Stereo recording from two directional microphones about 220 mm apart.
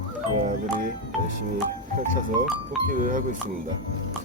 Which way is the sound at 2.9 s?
40° right (ahead or behind).